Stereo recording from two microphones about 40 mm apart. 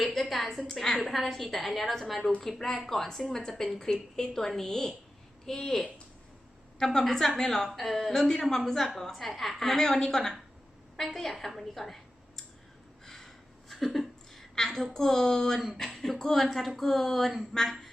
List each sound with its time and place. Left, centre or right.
0.0 s a woman's voice: centre
13.1 s a sound: centre
14.5 s a woman's voice: centre
15.8 s a woman's voice: centre